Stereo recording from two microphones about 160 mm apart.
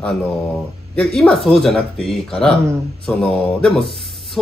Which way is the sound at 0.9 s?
5° left (ahead or behind).